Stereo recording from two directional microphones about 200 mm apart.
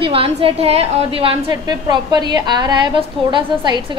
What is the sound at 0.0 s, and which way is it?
A woman's voice, 25° right (ahead or behind).